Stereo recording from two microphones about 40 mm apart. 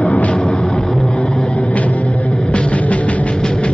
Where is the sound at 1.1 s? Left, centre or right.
Left.